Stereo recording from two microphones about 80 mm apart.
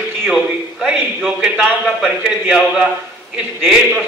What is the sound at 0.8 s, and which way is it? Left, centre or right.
A man's voice, centre.